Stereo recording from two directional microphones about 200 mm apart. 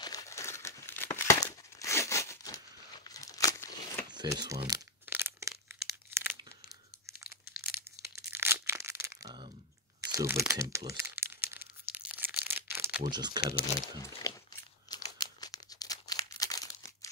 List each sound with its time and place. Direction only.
0.0 s crumpling: 15° left (ahead or behind)
4.1 s speech: 20° right (ahead or behind)
5.0 s a sound: 10° right (ahead or behind)
8.3 s crunch: 10° right (ahead or behind)
10.1 s crumpling: 10° right (ahead or behind)
11.9 s tearing: 5° right (ahead or behind)
12.4 s a sound: 10° right (ahead or behind)
13.1 s speech: 20° right (ahead or behind)
13.6 s speech: 15° left (ahead or behind)
14.9 s crumpling: 20° left (ahead or behind)